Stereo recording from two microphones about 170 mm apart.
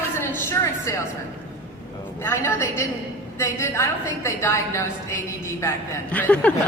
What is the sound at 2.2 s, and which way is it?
A woman's voice, 15° left (ahead or behind).